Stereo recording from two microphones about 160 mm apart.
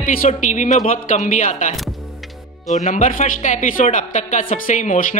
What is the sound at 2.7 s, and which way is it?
Speech, 50° left (ahead or behind).